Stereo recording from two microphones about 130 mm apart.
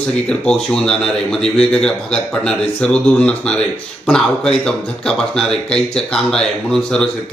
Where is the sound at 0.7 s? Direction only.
5° left (ahead or behind).